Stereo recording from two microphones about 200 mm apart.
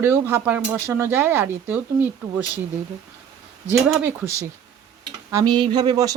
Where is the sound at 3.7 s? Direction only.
10° right (ahead or behind).